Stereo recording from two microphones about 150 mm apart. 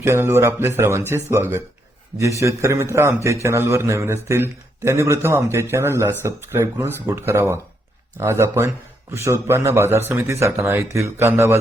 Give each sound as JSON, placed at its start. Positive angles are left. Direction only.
{"t": 0.0, "sound": "a man's voice", "side_deg": -15}